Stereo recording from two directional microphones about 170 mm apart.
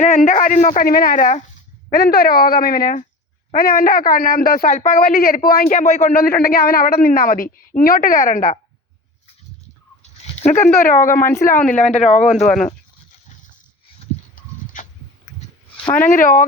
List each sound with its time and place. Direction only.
0.0 s speech: 50° left (ahead or behind)
1.9 s speech: 65° left (ahead or behind); by 6.1 s 45° left (ahead or behind)
6.1 s speech: 60° left (ahead or behind)
10.0 s a sound: 40° left (ahead or behind)
10.8 s speech: 55° left (ahead or behind)
11.7 s speech: 40° left (ahead or behind)
12.5 s speech: 5° left (ahead or behind)
14.3 s horse: 50° left (ahead or behind)
16.0 s speech: 55° left (ahead or behind)